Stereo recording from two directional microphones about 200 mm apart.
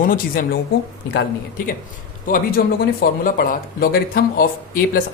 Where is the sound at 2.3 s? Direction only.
45° left (ahead or behind).